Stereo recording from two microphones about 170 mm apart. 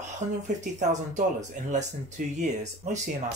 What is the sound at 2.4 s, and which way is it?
Speech, 45° right (ahead or behind).